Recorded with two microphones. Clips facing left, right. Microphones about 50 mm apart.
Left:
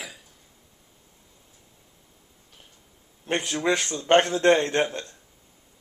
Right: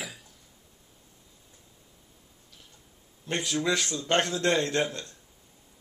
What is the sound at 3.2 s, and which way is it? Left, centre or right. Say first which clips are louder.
A man's voice: left 3 dB; left.